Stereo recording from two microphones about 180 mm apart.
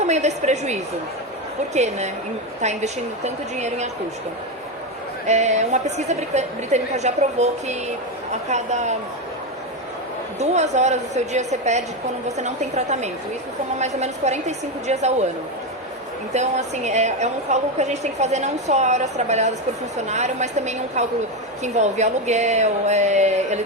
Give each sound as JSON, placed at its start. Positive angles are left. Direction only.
{"t": 0.0, "sound": "a woman's voice", "side_deg": -40}
{"t": 5.2, "sound": "a woman's voice", "side_deg": -40}
{"t": 10.4, "sound": "a woman's voice", "side_deg": -40}
{"t": 16.3, "sound": "a woman's voice", "side_deg": -40}